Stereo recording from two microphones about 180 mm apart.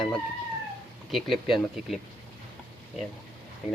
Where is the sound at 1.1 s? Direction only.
Centre (ahead or behind).